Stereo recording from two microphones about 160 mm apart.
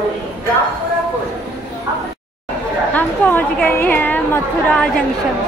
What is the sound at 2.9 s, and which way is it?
A woman's voice, 10° left (ahead or behind).